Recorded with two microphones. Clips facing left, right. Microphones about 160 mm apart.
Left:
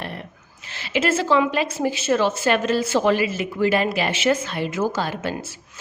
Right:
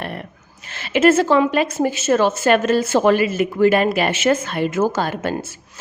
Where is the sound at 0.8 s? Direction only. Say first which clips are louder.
Right 7 dB; 50° right (ahead or behind).